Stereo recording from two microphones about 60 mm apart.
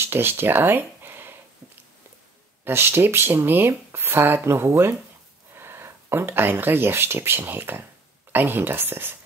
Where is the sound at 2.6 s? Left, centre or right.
Right.